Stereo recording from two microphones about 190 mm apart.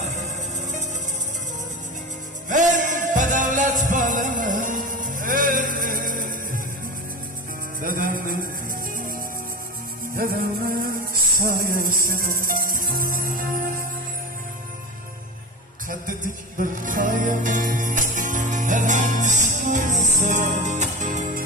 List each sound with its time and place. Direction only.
2.5 s music: 40° right (ahead or behind)
7.8 s music: 45° right (ahead or behind)
10.1 s music: 50° right (ahead or behind)
15.9 s music: 45° right (ahead or behind)